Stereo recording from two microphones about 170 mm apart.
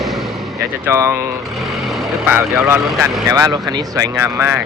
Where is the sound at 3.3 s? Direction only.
20° right (ahead or behind).